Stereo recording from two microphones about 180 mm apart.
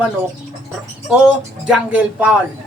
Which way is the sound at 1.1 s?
5° right (ahead or behind).